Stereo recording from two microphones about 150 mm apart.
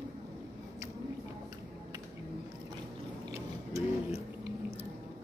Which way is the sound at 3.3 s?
20° right (ahead or behind).